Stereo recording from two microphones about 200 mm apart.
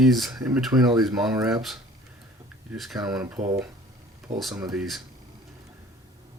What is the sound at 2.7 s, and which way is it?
Speech, centre (ahead or behind).